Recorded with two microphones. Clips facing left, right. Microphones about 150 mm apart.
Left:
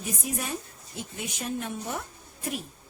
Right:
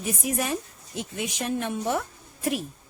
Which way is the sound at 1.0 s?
90° right.